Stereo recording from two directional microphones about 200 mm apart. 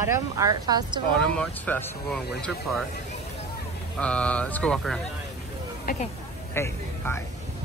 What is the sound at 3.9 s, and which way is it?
Speech, 5° left (ahead or behind).